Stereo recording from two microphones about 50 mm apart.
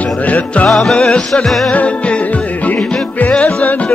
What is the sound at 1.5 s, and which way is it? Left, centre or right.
Music, centre.